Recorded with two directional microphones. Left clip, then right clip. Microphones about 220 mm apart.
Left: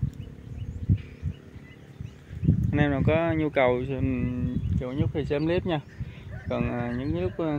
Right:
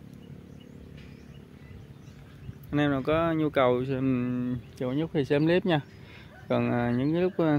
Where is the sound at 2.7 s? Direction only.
10° right (ahead or behind); by 7.6 s 35° right (ahead or behind).